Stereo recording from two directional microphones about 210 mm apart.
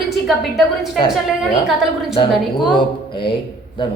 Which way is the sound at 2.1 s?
25° left (ahead or behind).